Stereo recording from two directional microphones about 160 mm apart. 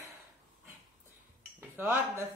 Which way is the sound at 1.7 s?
15° right (ahead or behind).